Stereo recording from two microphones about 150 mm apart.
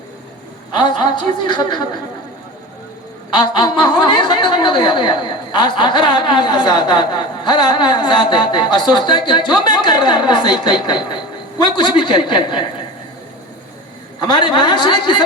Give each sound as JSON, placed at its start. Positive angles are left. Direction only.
{"t": 0.8, "sound": "a woman's voice", "side_deg": 30}
{"t": 3.3, "sound": "a woman's voice", "side_deg": 30}
{"t": 14.2, "sound": "a woman's voice", "side_deg": 30}